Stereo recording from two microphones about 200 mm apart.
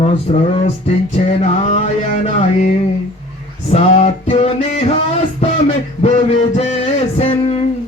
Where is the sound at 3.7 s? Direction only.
30° left (ahead or behind).